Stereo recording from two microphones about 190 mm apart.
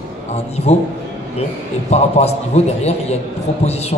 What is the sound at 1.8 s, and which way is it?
A man's voice, 35° left (ahead or behind).